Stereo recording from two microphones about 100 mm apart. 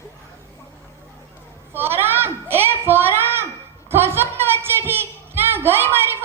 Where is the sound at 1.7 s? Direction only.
20° right (ahead or behind).